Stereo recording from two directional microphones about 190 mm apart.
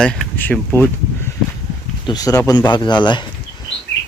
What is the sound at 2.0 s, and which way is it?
Speech, 20° left (ahead or behind).